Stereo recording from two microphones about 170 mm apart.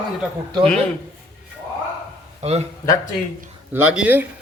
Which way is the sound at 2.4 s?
40° right (ahead or behind).